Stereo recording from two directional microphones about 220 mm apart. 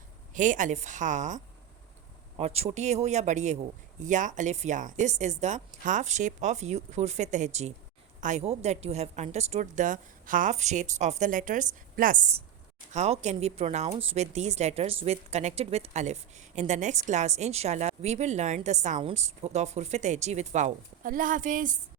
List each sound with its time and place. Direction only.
0.3 s speech: 35° right (ahead or behind)
2.4 s speech: 30° right (ahead or behind)